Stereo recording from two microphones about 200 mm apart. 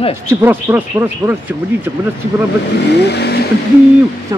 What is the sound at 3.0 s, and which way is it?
Vehicle, 55° left (ahead or behind).